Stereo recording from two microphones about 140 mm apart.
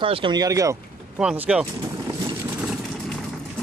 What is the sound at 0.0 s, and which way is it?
Speech, 40° right (ahead or behind).